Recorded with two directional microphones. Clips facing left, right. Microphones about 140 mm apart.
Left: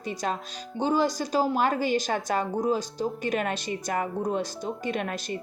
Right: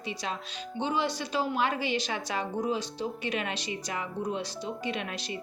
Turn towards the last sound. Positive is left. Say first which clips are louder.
# left 4 dB
turn(degrees=45)  # may be behind; listen again after turning